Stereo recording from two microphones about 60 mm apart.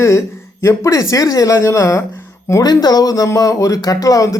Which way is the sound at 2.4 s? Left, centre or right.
Left.